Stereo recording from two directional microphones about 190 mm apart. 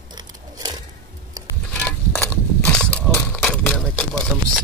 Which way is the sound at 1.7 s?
10° left (ahead or behind).